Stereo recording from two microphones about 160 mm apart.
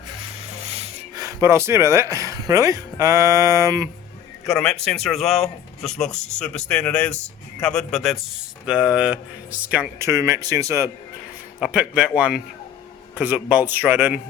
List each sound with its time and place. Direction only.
1.1 s speech: 20° right (ahead or behind)
4.4 s speech: 5° left (ahead or behind); by 10.9 s 20° right (ahead or behind)
11.6 s speech: 5° right (ahead or behind)